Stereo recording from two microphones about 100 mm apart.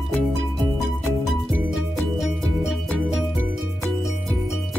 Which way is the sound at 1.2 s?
Centre (ahead or behind).